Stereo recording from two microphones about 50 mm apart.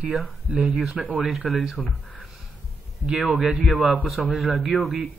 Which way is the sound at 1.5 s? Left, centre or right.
Centre.